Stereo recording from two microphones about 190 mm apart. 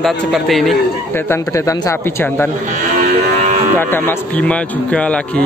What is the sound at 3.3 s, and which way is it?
Moo, 35° right (ahead or behind).